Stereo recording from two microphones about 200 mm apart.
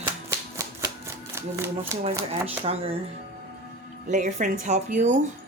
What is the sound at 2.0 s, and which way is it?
Speech, 30° right (ahead or behind).